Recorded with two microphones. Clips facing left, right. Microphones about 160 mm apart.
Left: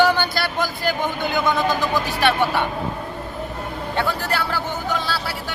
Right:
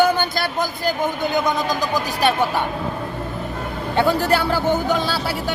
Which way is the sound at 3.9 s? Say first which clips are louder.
Right 6 dB; 15° right (ahead or behind).